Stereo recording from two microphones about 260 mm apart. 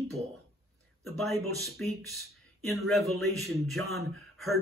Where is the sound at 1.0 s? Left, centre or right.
Centre.